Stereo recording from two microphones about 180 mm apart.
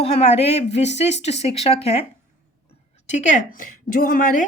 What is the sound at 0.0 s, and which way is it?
Speech, 35° left (ahead or behind).